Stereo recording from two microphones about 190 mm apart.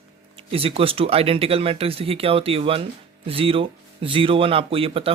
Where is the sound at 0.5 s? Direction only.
30° right (ahead or behind).